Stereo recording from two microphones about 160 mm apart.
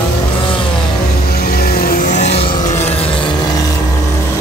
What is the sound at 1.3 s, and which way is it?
Vehicle, 70° left (ahead or behind).